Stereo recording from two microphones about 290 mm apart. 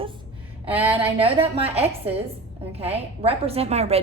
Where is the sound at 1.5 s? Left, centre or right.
Right.